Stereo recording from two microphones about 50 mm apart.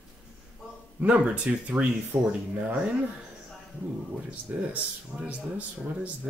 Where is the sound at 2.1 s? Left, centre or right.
Right.